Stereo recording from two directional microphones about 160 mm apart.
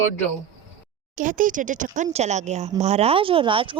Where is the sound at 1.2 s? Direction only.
55° right (ahead or behind).